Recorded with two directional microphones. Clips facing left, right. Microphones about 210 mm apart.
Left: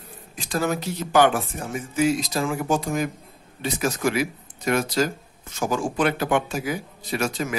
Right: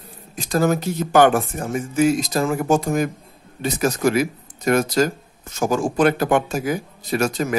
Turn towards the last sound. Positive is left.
turn(degrees=-40)  # may be behind; listen again after turning